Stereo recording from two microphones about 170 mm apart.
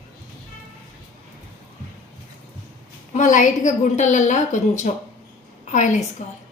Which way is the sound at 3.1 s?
50° left (ahead or behind).